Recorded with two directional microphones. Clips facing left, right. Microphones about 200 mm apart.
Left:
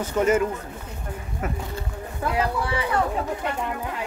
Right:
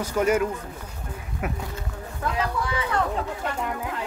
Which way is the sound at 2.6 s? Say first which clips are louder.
Left 2 dB; 30° left (ahead or behind).